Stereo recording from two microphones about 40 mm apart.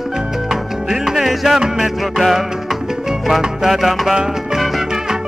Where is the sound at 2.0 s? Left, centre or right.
Centre.